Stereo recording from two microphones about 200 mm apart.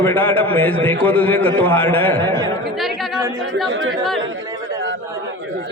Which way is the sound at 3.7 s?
75° right (ahead or behind).